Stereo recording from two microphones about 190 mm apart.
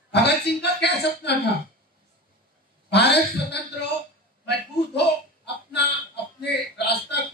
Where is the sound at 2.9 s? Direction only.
60° left (ahead or behind).